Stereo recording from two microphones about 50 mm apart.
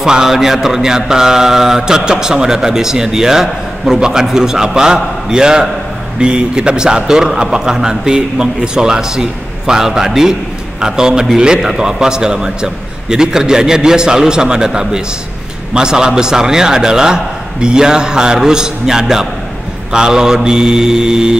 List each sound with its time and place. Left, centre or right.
0.0 s mantra: centre